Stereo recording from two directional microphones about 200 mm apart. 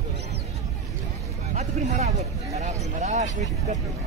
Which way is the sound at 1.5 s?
35° right (ahead or behind).